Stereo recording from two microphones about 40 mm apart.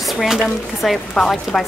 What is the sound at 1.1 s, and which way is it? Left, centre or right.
Speech, centre.